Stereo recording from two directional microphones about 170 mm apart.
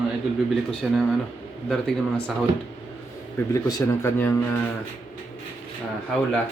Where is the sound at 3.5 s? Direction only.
20° left (ahead or behind).